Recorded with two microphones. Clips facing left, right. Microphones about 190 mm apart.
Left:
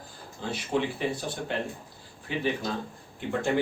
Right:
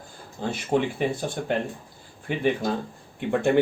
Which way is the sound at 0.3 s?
50° right (ahead or behind).